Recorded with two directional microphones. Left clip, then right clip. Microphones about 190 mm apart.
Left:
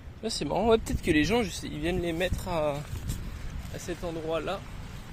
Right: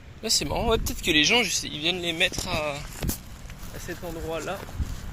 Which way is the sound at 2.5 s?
45° left (ahead or behind).